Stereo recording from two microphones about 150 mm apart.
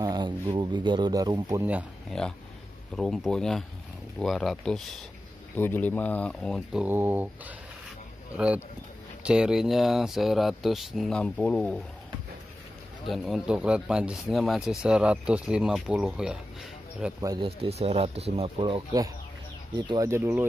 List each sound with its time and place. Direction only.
0.0 s speech: 30° right (ahead or behind)
2.0 s speech: 5° left (ahead or behind)
5.6 s speech: 10° left (ahead or behind)
6.8 s speech: 15° right (ahead or behind); by 11.8 s 5° left (ahead or behind)
13.0 s speech: centre (ahead or behind)
17.6 s speech: 40° right (ahead or behind)
20.1 s speech: 15° right (ahead or behind)